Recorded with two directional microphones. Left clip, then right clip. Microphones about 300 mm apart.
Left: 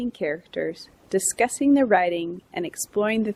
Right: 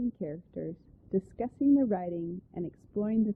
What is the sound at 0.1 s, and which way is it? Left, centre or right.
Speech, centre.